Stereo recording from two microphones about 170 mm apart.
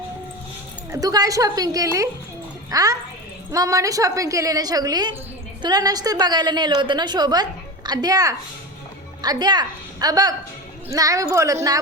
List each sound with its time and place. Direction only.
0.9 s a woman's voice: 20° right (ahead or behind)